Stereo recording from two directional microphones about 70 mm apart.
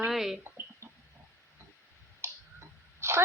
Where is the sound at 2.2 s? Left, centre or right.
Right.